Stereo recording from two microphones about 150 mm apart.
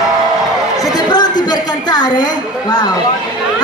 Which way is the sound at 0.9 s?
30° left (ahead or behind).